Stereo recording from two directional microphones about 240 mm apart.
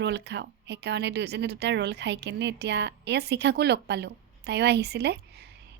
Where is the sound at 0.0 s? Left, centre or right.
Right.